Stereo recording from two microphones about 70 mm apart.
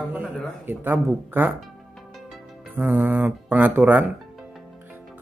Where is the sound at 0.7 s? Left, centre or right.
Right.